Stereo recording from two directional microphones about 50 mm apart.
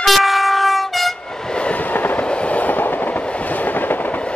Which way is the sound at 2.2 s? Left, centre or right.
Left.